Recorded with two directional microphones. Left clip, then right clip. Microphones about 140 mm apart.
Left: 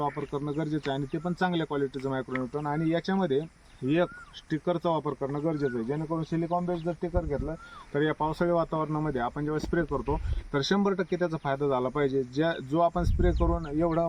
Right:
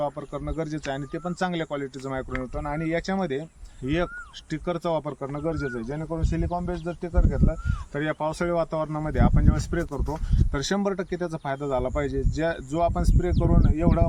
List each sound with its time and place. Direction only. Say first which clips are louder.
0.0 s speech: right 2 dB; 15° right (ahead or behind)
4.5 s speech: right 1 dB; 20° right (ahead or behind)